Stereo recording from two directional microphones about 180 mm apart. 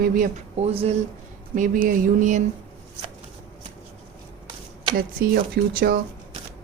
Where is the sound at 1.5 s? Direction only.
45° right (ahead or behind).